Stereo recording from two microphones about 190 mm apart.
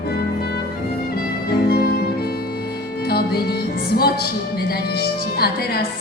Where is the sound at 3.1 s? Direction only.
55° left (ahead or behind).